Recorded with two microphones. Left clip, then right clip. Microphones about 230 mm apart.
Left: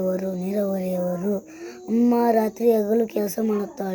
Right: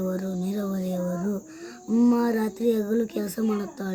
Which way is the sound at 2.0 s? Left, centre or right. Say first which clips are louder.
Left 3 dB; right.